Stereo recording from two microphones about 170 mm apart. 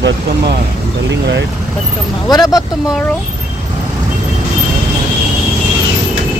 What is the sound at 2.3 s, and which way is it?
Speech, 20° left (ahead or behind).